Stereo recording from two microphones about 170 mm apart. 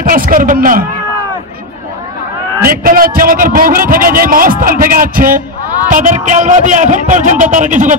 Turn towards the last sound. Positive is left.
turn(degrees=-50)  # may be behind; listen again after turning